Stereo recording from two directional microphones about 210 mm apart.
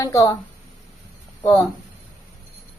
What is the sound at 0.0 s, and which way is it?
Speech, 15° left (ahead or behind).